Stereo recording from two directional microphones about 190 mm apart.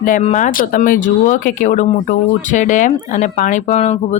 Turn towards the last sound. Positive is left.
turn(degrees=35)  # may be behind; listen again after turning